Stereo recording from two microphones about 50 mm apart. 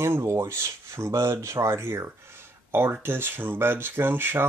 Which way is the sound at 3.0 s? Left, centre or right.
Right.